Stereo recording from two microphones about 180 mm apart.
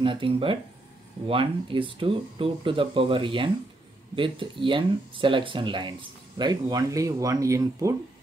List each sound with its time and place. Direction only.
0.0 s speech: 30° right (ahead or behind)